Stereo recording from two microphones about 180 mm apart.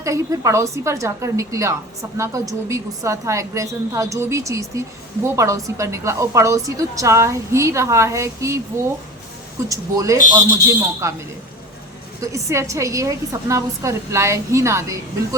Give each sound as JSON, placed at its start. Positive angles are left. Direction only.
{"t": 0.0, "sound": "a woman's voice", "side_deg": -15}
{"t": 9.6, "sound": "a woman's voice", "side_deg": -20}
{"t": 12.2, "sound": "a woman's voice", "side_deg": -15}